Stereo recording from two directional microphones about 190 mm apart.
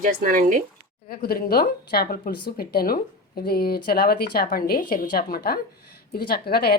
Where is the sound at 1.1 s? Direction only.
55° left (ahead or behind).